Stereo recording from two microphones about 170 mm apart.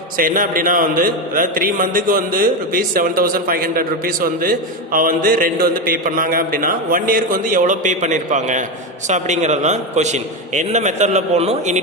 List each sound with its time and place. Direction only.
0.2 s a man's voice: 55° right (ahead or behind)